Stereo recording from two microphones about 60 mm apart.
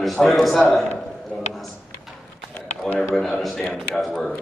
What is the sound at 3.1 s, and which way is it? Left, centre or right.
A man's voice, centre.